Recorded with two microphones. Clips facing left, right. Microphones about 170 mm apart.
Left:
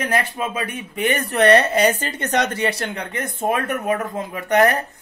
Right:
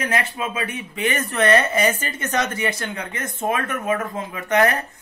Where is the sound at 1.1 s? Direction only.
35° left (ahead or behind).